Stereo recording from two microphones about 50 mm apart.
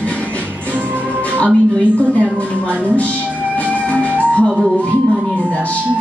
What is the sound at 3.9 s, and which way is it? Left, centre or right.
Music, left.